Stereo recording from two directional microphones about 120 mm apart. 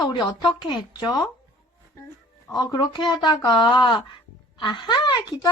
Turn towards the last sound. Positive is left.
turn(degrees=40)  # may be behind; listen again after turning